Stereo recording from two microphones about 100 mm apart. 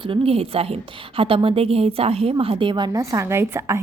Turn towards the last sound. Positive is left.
turn(degrees=-25)  # may be behind; listen again after turning